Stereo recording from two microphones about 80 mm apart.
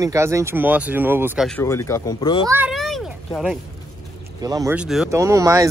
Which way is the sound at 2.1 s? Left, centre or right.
Left.